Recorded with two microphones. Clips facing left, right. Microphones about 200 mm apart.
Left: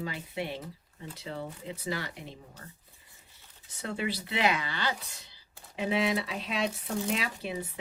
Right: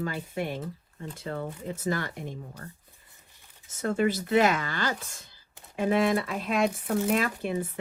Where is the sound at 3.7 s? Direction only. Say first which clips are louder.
Right 8 dB; 45° right (ahead or behind).